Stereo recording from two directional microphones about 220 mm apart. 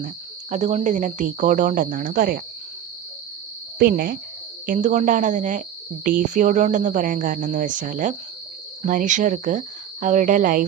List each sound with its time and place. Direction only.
0.5 s speech: 35° right (ahead or behind)
3.8 s speech: 40° right (ahead or behind)